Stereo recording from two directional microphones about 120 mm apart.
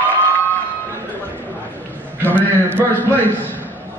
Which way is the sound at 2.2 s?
15° left (ahead or behind).